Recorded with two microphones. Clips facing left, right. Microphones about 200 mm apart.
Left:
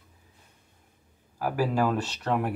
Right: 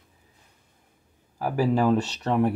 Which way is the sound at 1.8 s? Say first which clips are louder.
Right 4 dB; 20° right (ahead or behind).